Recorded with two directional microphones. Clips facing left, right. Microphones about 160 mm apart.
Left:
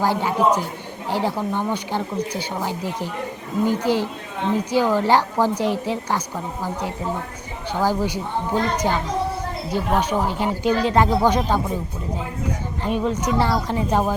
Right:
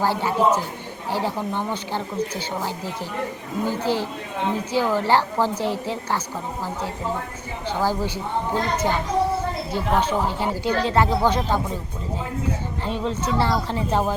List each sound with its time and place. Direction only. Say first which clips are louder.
0.0 s speech: left 1 dB; 15° left (ahead or behind)
7.7 s speech: left 2 dB; 15° left (ahead or behind)
12.8 s speech: left 4 dB; 15° left (ahead or behind)